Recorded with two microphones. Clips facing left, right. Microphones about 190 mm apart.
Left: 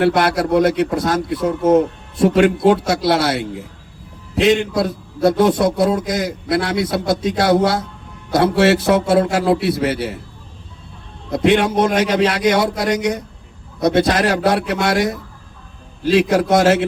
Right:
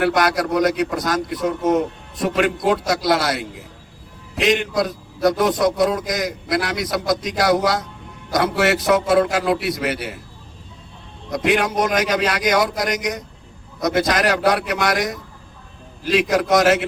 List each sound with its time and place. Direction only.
0.0 s a man's voice: 30° left (ahead or behind)
11.3 s a man's voice: 30° left (ahead or behind)
16.3 s a man's voice: 30° left (ahead or behind)